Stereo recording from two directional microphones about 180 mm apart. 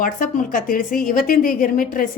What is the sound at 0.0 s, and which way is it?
A woman's voice, 50° left (ahead or behind).